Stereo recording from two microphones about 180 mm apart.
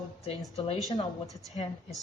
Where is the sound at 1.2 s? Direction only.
Centre (ahead or behind).